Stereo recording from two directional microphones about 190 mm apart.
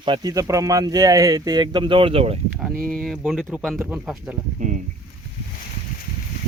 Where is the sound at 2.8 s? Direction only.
Centre (ahead or behind).